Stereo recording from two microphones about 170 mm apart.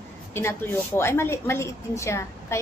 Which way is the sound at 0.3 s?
15° left (ahead or behind).